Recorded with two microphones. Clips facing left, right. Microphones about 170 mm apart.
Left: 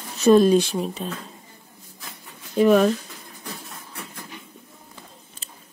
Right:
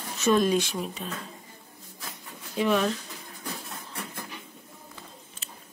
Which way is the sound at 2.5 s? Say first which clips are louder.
Left 8 dB; 45° left (ahead or behind).